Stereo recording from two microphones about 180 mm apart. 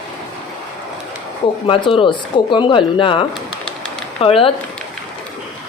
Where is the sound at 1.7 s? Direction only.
30° left (ahead or behind).